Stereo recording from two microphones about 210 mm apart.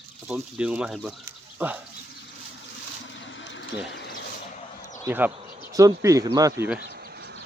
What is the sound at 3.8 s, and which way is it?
Speech, 55° left (ahead or behind).